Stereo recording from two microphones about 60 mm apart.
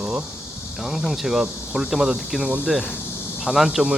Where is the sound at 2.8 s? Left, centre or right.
Left.